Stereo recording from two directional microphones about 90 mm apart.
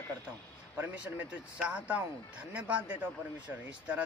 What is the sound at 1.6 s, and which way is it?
Speech, 15° right (ahead or behind).